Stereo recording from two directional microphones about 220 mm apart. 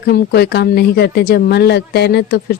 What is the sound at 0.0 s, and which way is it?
Speech, 45° left (ahead or behind).